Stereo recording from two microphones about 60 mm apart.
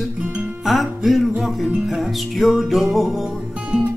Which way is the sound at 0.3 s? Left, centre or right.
Right.